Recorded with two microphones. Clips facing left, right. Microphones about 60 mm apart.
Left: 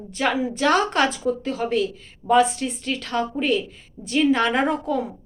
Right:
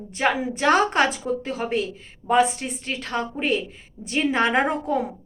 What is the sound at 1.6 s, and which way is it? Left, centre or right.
A woman's voice, right.